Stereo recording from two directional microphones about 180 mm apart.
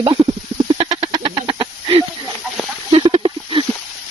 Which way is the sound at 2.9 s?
30° right (ahead or behind).